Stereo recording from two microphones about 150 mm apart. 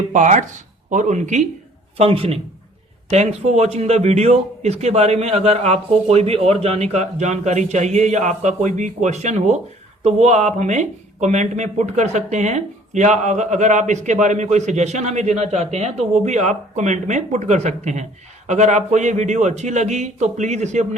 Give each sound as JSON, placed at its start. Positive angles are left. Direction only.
{"t": 0.1, "sound": "speech", "side_deg": -55}
{"t": 2.0, "sound": "speech", "side_deg": -40}